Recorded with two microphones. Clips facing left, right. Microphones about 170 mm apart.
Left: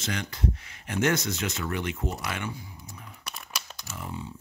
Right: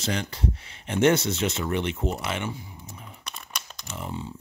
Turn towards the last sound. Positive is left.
turn(degrees=-25)  # may be behind; listen again after turning